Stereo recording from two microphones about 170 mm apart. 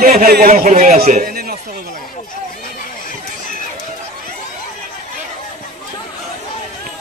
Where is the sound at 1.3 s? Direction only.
60° right (ahead or behind).